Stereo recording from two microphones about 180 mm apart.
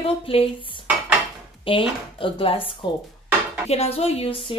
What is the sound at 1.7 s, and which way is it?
A woman's voice, 30° left (ahead or behind).